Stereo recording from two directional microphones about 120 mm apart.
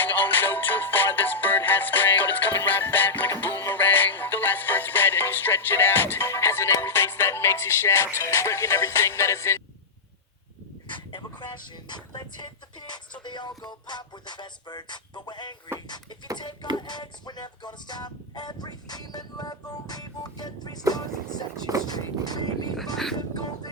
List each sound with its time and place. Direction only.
0.0 s music: 15° left (ahead or behind)
10.9 s vehicle: 40° left (ahead or behind)
13.2 s music: 40° left (ahead or behind)
16.7 s music: 35° left (ahead or behind)
21.8 s a sound: 35° left (ahead or behind)
22.8 s music: 5° left (ahead or behind)